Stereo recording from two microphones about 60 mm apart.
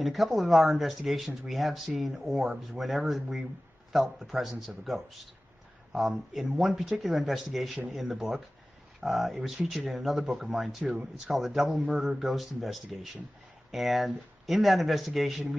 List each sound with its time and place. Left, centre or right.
0.0 s speech: centre
10.8 s speech: centre
11.2 s speech: centre